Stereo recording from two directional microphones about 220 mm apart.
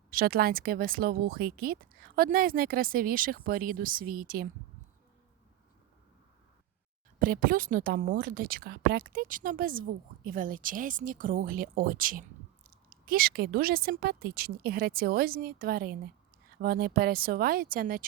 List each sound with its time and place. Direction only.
0.1 s speech: 40° right (ahead or behind)
7.2 s speech: 40° right (ahead or behind)